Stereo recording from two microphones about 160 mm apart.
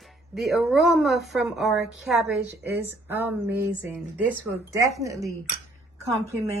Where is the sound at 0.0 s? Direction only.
Centre (ahead or behind); by 5.1 s 20° right (ahead or behind).